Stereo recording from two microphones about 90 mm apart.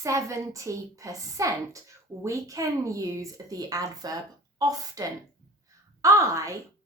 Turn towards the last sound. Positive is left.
turn(degrees=-35)  # may be behind; listen again after turning